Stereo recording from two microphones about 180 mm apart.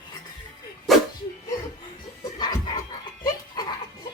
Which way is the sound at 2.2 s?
20° left (ahead or behind).